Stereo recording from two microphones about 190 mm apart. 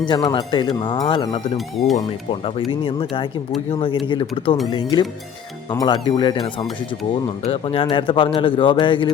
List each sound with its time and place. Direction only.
0.0 s a man's voice: 25° left (ahead or behind)
1.5 s speech: centre (ahead or behind)
2.4 s a man's voice: 30° left (ahead or behind)
7.4 s a man's voice: 30° left (ahead or behind)